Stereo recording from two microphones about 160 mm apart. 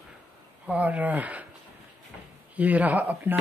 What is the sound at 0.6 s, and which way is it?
Speech, 10° right (ahead or behind).